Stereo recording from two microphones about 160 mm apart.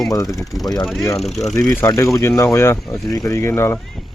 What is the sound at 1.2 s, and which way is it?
Speech, centre (ahead or behind).